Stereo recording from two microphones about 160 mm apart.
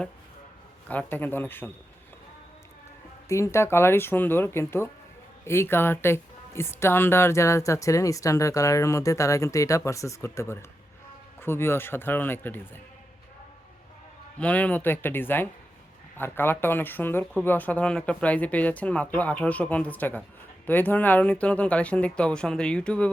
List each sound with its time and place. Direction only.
0.9 s speech: 10° left (ahead or behind)
3.2 s speech: 20° left (ahead or behind)
14.3 s speech: 10° left (ahead or behind)